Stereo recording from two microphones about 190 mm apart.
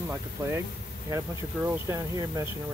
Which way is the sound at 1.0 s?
15° right (ahead or behind).